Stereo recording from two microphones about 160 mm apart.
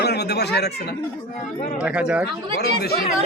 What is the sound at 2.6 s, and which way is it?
Speech, 80° left.